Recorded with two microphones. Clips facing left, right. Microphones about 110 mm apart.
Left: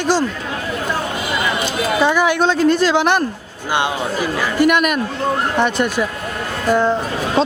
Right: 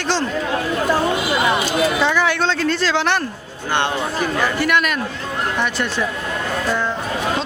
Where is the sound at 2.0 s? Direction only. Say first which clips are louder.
Left 3 dB; 15° left (ahead or behind).